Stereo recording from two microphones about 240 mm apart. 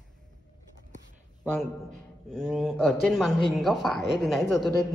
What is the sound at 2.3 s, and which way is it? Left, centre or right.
A woman's voice, centre.